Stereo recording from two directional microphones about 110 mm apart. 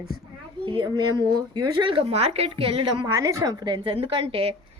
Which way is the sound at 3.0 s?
30° right (ahead or behind).